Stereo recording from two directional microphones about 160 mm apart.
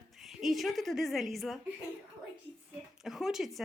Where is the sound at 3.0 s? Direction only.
Centre (ahead or behind).